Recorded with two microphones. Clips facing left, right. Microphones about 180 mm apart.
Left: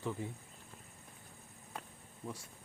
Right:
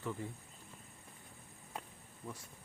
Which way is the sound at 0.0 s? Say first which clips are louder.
Left 2 dB; 15° left (ahead or behind).